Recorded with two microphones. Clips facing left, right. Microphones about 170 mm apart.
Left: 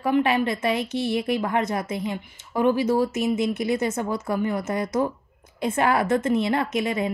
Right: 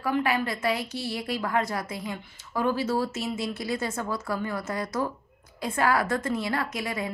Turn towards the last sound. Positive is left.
turn(degrees=20)  # may be behind; listen again after turning